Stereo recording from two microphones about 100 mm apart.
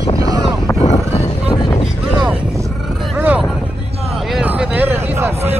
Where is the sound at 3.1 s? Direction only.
15° right (ahead or behind).